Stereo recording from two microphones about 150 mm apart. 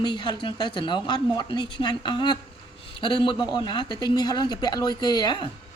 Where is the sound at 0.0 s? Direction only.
30° left (ahead or behind).